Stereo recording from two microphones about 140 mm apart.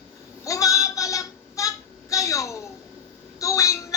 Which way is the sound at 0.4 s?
25° left (ahead or behind).